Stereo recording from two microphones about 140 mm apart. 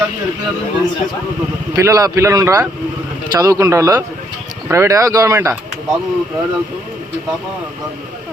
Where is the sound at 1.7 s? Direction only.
20° right (ahead or behind).